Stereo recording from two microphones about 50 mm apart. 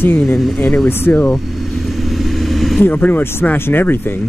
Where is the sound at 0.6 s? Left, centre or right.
Left.